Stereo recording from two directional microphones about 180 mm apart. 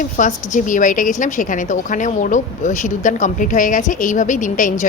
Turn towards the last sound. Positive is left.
turn(degrees=45)  # may be behind; listen again after turning